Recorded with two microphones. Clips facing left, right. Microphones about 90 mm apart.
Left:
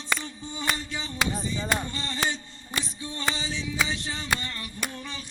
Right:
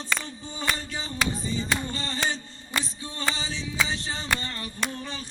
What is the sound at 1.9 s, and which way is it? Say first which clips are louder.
Mantra: even; 35° right (ahead or behind).